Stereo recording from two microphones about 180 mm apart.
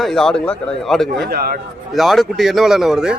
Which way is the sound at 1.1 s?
60° right (ahead or behind).